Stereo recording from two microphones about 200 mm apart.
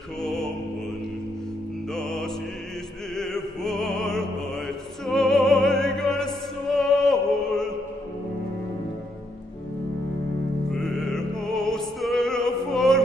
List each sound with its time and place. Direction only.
0.2 s music: centre (ahead or behind)
2.0 s music: centre (ahead or behind)
3.2 s opera: 5° left (ahead or behind)
10.7 s music: centre (ahead or behind)